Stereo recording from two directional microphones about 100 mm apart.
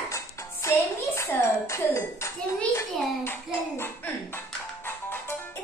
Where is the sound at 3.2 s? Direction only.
20° left (ahead or behind).